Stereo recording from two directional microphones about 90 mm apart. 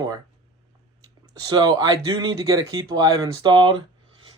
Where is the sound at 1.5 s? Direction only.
45° right (ahead or behind).